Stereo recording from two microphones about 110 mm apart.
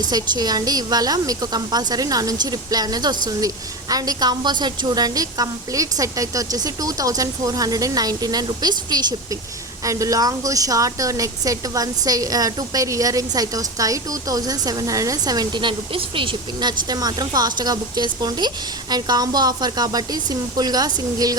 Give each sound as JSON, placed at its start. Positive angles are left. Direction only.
{"t": 0.1, "sound": "speech", "side_deg": -35}